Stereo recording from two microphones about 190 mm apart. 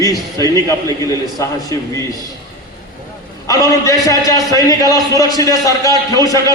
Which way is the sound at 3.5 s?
15° left (ahead or behind).